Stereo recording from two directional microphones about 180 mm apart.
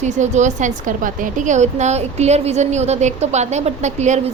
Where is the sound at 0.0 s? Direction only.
40° right (ahead or behind).